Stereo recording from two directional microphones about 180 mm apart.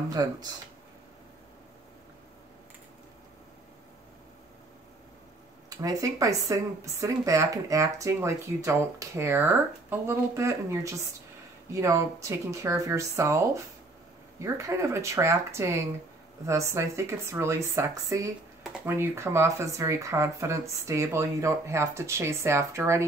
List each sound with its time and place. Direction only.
0.1 s speech: 20° right (ahead or behind)
5.7 s speech: 20° right (ahead or behind)
14.4 s speech: 15° right (ahead or behind)